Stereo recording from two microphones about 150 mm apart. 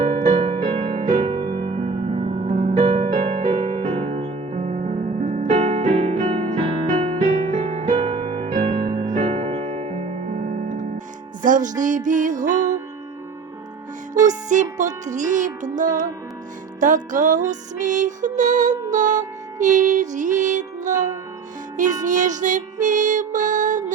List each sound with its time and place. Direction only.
0.0 s music: 45° right (ahead or behind)
0.9 s harp: 60° right (ahead or behind)
1.2 s music: 30° right (ahead or behind)
2.5 s music: 60° right (ahead or behind)
3.8 s music: 35° right (ahead or behind); by 6.4 s 55° right (ahead or behind)
6.5 s music: 40° right (ahead or behind)
6.9 s music: 50° right (ahead or behind)
8.7 s music: 70° right (ahead or behind)
9.2 s music: 45° right (ahead or behind); by 12.5 s 60° right (ahead or behind)
14.3 s music: 55° right (ahead or behind)